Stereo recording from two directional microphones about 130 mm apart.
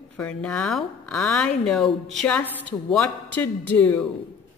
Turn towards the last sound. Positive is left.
turn(degrees=15)  # may be behind; listen again after turning